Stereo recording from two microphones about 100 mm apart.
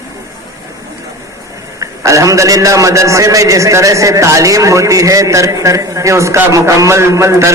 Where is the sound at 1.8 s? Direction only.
35° right (ahead or behind).